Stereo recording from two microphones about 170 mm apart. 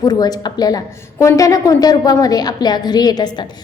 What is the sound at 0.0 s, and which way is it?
A woman's voice, 25° left (ahead or behind).